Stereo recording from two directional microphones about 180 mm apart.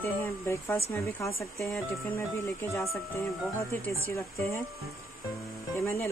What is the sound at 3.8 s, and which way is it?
Speech, 15° left (ahead or behind).